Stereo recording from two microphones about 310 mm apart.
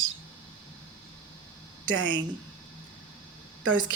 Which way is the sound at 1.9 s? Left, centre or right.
Right.